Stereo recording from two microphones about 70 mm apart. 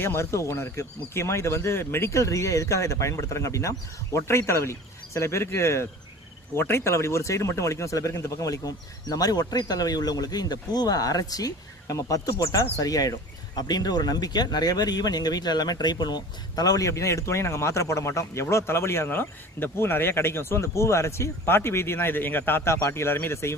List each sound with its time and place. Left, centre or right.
0.0 s speech: left
13.6 s speech: left